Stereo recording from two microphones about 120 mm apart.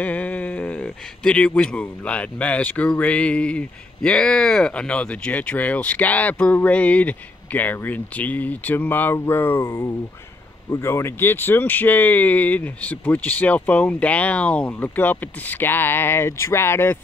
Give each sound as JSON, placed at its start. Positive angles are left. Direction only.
{"t": 0.0, "sound": "speech", "side_deg": 10}
{"t": 9.6, "sound": "speech", "side_deg": 30}